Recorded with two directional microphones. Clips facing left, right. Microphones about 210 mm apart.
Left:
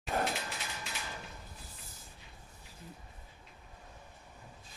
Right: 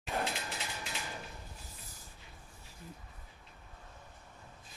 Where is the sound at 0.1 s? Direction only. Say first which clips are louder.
Left 3 dB; 45° left (ahead or behind).